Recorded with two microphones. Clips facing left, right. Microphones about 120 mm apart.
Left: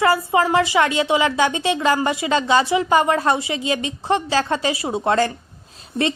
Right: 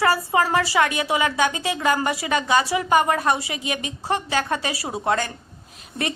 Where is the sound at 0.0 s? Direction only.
25° left (ahead or behind).